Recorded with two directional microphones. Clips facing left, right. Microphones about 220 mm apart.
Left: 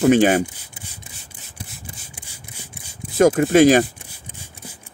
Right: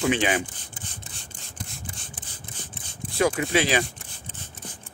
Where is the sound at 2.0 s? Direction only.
10° left (ahead or behind).